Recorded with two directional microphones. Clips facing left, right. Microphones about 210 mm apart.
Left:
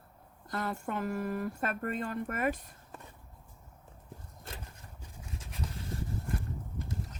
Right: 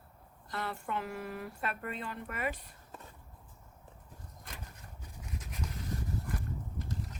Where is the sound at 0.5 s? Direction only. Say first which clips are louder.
Left 3 dB; 45° left (ahead or behind).